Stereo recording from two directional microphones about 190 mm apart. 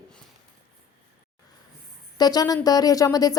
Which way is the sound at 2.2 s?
20° left (ahead or behind).